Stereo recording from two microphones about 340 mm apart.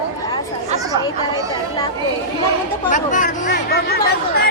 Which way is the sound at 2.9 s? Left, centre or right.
Left.